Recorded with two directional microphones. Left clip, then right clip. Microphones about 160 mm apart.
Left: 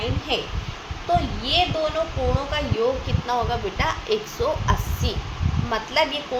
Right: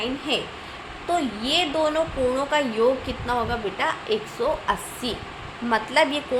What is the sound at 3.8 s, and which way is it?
A woman's voice, 10° right (ahead or behind).